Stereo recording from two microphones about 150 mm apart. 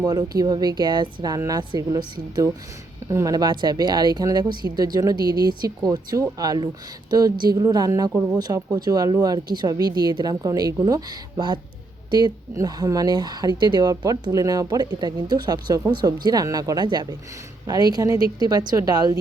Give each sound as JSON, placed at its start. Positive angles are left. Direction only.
{"t": 0.0, "sound": "speech", "side_deg": -25}
{"t": 3.1, "sound": "speech", "side_deg": -20}